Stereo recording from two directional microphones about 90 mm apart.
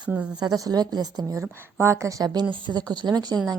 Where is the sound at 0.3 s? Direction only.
45° right (ahead or behind).